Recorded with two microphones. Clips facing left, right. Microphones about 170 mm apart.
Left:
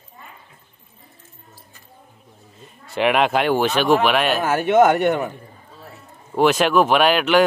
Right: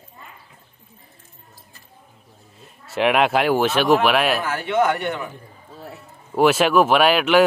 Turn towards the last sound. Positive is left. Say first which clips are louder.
# even
turn(degrees=-5)  # may be behind; listen again after turning